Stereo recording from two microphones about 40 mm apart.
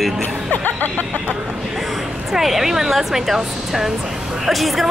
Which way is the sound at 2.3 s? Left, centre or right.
Centre.